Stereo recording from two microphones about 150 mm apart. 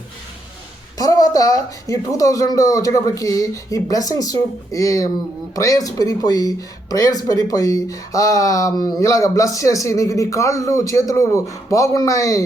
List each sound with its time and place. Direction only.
0.9 s speech: 25° left (ahead or behind)